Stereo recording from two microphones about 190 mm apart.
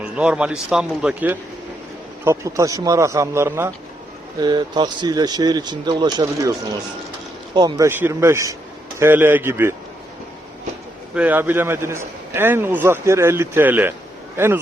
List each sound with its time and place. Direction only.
0.0 s a man's voice: 5° right (ahead or behind); by 6.5 s 20° right (ahead or behind)
7.5 s a man's voice: 20° right (ahead or behind)
11.1 s a man's voice: 10° right (ahead or behind)